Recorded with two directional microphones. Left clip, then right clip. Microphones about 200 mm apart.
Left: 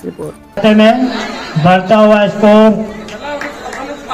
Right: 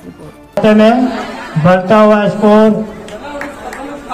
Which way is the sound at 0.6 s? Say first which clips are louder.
Even; 55° right (ahead or behind).